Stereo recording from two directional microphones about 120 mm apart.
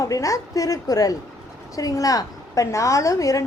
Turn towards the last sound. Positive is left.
turn(degrees=25)  # may be behind; listen again after turning